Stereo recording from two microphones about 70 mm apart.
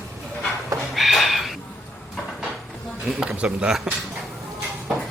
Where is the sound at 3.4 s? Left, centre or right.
Centre.